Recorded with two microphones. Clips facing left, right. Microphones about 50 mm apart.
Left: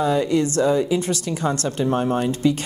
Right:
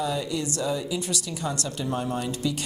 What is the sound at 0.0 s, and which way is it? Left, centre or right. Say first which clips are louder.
Speech: left 9 dB; left.